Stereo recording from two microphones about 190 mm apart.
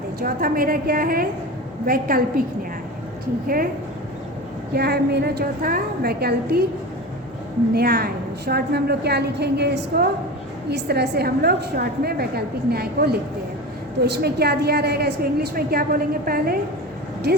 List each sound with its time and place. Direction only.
0.2 s a woman's voice: 50° right (ahead or behind)
3.4 s a woman's voice: 50° right (ahead or behind)
4.7 s a woman's voice: 60° right (ahead or behind)
7.7 s a woman's voice: 55° right (ahead or behind)